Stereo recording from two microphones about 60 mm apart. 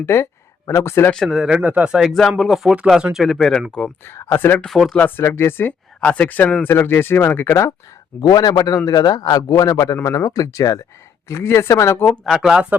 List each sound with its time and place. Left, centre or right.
0.0 s speech: left
1.3 s speech: centre
2.4 s speech: centre
4.4 s speech: left
4.6 s speech: centre
4.9 s speech: left
5.2 s speech: left
8.2 s a man's voice: left
11.3 s speech: left
12.4 s speech: centre